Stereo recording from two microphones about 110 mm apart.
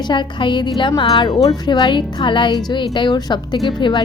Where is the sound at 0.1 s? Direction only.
45° left (ahead or behind).